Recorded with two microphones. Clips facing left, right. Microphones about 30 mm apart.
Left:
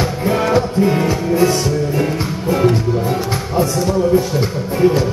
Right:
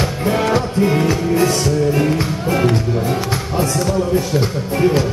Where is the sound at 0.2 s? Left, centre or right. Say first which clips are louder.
Left 2 dB; centre.